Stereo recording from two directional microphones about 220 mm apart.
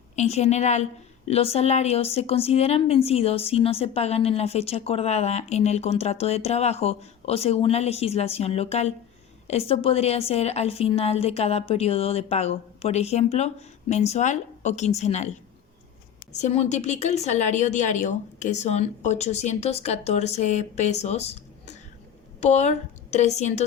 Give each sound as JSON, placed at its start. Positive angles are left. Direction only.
{"t": 0.2, "sound": "a woman's voice", "side_deg": 30}
{"t": 16.3, "sound": "a woman's voice", "side_deg": 30}